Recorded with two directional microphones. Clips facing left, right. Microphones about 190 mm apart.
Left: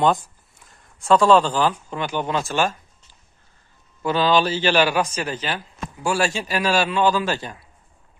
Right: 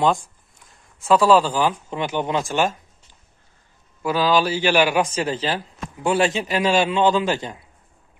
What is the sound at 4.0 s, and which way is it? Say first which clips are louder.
A man's voice: even; 5° right (ahead or behind).